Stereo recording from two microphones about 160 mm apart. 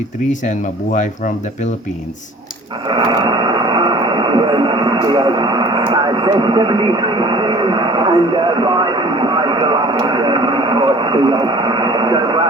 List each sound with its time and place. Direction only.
0.3 s speech: 50° left (ahead or behind)
2.8 s radio: 30° right (ahead or behind)